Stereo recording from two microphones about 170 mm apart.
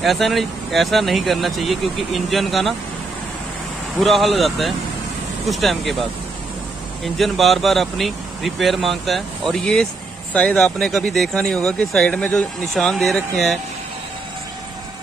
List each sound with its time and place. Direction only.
0.0 s speech: centre (ahead or behind)
4.0 s speech: centre (ahead or behind)
7.2 s speech: centre (ahead or behind)